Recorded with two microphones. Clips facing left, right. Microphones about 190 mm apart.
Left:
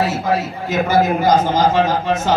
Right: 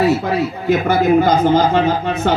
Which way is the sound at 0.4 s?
60° right (ahead or behind).